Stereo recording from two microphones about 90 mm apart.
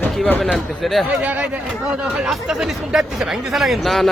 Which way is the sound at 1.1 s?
15° right (ahead or behind).